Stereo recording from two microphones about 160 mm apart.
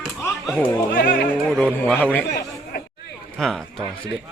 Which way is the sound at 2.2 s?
90° left.